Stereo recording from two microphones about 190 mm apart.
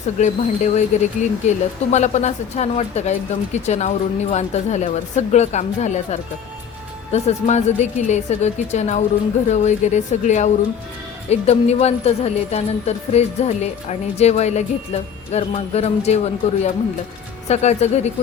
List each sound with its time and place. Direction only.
0.2 s speech: 35° left (ahead or behind)